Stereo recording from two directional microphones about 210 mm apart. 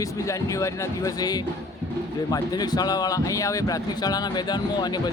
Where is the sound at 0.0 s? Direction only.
15° left (ahead or behind).